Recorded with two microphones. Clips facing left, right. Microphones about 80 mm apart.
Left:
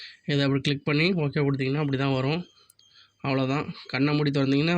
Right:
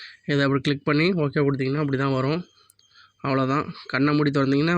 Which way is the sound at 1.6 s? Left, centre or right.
Centre.